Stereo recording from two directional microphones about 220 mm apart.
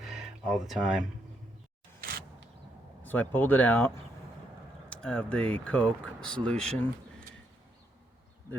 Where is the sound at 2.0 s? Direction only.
45° right (ahead or behind).